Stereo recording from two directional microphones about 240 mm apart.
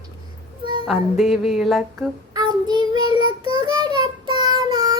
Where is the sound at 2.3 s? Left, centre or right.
Centre.